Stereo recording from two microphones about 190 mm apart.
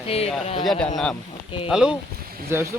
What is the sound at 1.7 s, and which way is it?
Speech, 5° right (ahead or behind).